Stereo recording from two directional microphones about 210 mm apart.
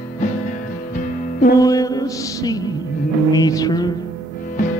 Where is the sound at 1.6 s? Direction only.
15° left (ahead or behind).